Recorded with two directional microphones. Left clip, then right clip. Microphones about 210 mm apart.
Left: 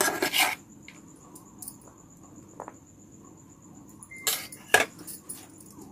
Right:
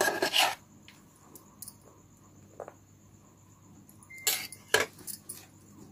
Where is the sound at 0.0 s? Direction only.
15° left (ahead or behind).